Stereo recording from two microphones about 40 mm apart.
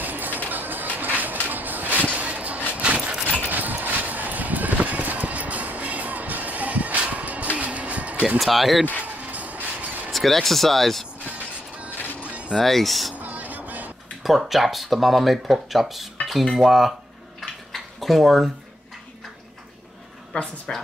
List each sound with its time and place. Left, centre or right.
0.0 s music: right
0.9 s a sound: right
1.5 s vehicle: right
2.1 s a sound: right
3.4 s clip-clop: right
8.4 s speech: centre
9.0 s music: right
10.1 s speech: centre
12.2 s zipper: right
12.5 s speech: centre
13.1 s vehicle: right
14.2 s speech: centre
17.4 s dishes: centre
20.3 s speech: left